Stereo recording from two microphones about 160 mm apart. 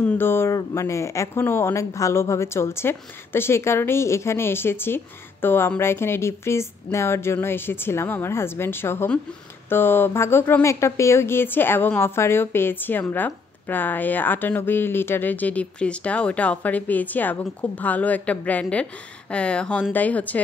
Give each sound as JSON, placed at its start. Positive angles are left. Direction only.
{"t": 0.0, "sound": "speech", "side_deg": 15}